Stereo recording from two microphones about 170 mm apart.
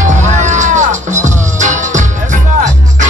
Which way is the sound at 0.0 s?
45° right (ahead or behind).